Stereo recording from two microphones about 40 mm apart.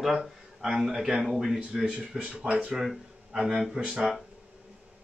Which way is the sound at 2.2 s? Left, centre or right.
Right.